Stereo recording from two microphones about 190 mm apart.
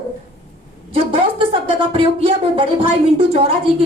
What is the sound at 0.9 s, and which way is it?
A woman's voice, 30° right (ahead or behind).